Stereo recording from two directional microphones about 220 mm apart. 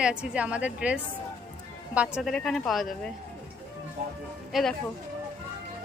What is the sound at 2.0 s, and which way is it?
A woman's voice, centre (ahead or behind).